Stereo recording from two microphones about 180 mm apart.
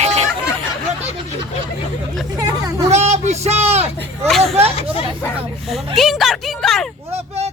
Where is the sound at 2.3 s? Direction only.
20° right (ahead or behind).